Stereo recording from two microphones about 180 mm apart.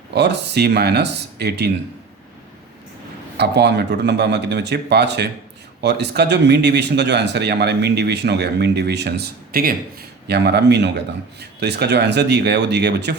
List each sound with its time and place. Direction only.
0.1 s speech: 70° right (ahead or behind)
3.3 s speech: 65° right (ahead or behind)
10.2 s speech: 65° right (ahead or behind)